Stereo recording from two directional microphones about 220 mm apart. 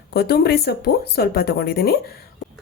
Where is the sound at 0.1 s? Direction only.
45° left (ahead or behind).